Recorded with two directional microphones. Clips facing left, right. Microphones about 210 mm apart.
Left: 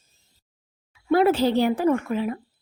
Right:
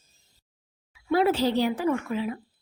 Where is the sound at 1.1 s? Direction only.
55° left (ahead or behind).